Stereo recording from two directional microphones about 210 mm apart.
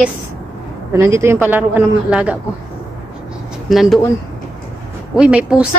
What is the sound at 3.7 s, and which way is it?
Speech, centre (ahead or behind).